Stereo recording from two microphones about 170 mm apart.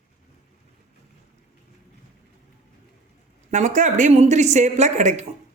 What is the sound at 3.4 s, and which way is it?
A woman's voice, 45° right (ahead or behind).